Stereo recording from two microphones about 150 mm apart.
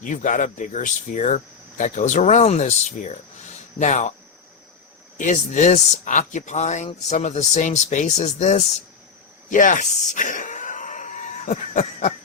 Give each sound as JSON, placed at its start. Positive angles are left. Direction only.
{"t": 0.0, "sound": "speech", "side_deg": 60}
{"t": 5.1, "sound": "speech", "side_deg": 55}
{"t": 9.5, "sound": "a sound", "side_deg": 60}